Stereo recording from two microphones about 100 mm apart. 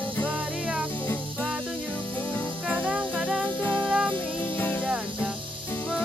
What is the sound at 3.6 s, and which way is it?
Music, 15° left (ahead or behind).